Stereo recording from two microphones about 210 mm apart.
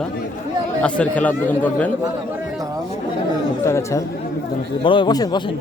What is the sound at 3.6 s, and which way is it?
A man's voice, 15° left (ahead or behind).